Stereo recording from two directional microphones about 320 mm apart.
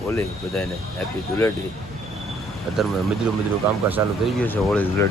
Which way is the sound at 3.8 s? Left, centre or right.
Centre.